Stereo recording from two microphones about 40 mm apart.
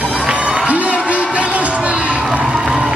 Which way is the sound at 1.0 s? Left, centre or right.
Right.